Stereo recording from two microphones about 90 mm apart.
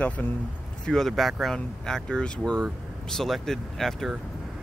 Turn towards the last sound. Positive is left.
turn(degrees=5)  # may be behind; listen again after turning